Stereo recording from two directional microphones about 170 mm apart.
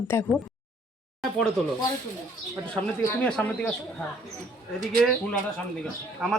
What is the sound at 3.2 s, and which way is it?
Speech, 10° left (ahead or behind).